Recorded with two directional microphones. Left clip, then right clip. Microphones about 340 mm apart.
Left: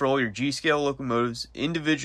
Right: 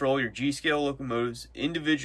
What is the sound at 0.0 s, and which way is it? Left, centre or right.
Speech, centre.